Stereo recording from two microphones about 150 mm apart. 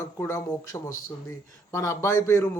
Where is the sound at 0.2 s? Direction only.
20° left (ahead or behind).